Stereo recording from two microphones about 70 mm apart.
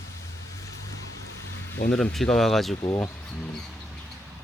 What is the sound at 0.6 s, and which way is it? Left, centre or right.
Vehicle, left.